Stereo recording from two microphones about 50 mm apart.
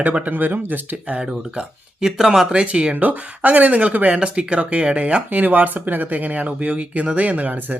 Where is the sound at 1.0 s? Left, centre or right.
Right.